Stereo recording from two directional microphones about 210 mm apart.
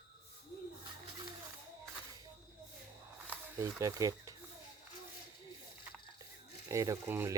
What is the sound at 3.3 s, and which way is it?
Speech, 15° right (ahead or behind).